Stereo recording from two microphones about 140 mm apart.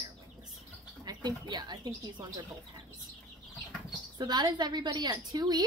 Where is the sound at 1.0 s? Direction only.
30° right (ahead or behind).